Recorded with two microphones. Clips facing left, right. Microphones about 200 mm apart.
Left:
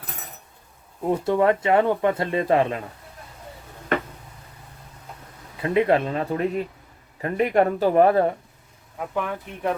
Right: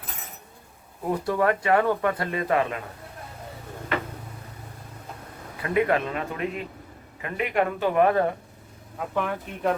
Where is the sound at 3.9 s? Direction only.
50° left (ahead or behind).